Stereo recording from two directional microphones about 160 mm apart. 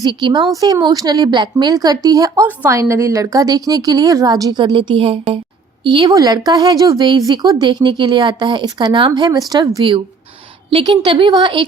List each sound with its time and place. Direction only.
0.0 s a woman's voice: 30° right (ahead or behind)